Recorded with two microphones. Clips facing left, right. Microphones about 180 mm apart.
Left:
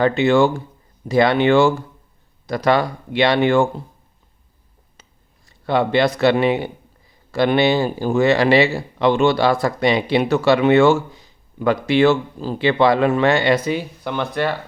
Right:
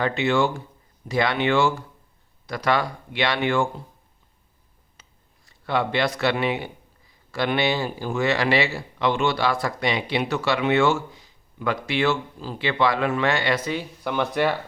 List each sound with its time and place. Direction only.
0.0 s speech: 35° left (ahead or behind)
5.8 s speech: 30° left (ahead or behind); by 13.8 s 10° left (ahead or behind)
14.0 s speech: 10° right (ahead or behind)